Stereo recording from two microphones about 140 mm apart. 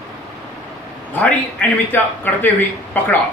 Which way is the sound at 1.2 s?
15° left (ahead or behind).